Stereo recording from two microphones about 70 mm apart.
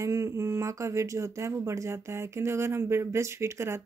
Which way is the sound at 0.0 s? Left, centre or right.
Right.